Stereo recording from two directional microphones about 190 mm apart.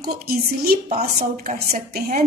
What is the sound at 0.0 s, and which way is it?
A woman's voice, 50° right (ahead or behind).